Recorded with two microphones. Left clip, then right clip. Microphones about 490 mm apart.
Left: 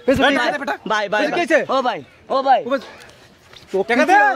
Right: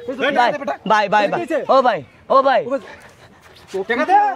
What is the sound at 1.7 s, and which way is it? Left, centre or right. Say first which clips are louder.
Speech: right 5 dB; right.